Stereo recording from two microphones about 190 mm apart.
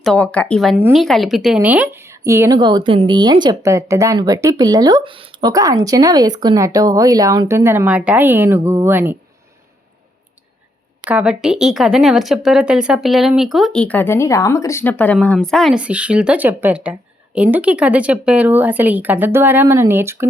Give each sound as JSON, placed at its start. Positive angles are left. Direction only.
{"t": 0.0, "sound": "a woman's voice", "side_deg": 5}
{"t": 11.1, "sound": "speech", "side_deg": -5}